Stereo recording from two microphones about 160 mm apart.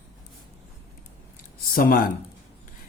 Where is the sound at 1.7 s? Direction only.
65° left (ahead or behind).